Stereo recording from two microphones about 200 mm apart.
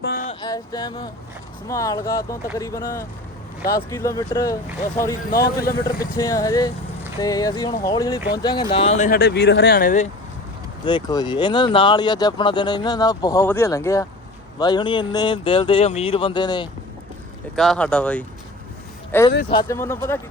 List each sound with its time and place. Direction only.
0.0 s a sound: 55° left (ahead or behind)
0.4 s music: 20° left (ahead or behind)
1.6 s speech: 15° left (ahead or behind)
5.3 s speech: 50° left (ahead or behind)
6.0 s speech: 15° left (ahead or behind)
9.0 s speech: 55° left (ahead or behind)
10.8 s speech: 20° left (ahead or behind)
17.5 s speech: centre (ahead or behind)